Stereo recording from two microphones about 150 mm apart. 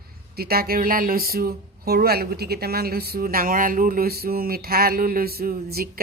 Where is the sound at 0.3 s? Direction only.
90° right.